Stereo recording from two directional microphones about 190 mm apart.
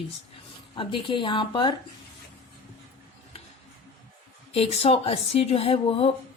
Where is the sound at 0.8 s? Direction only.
25° left (ahead or behind).